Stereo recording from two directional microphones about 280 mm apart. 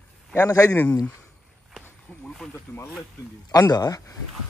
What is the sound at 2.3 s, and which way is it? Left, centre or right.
Speech, centre.